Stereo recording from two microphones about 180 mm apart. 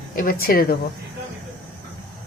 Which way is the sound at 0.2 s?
55° left (ahead or behind).